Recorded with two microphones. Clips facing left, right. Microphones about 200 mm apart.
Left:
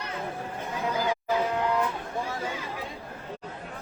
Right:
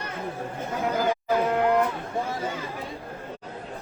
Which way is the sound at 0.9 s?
50° right (ahead or behind).